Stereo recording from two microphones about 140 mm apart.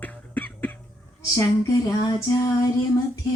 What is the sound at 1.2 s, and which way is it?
Female singing, 25° left (ahead or behind).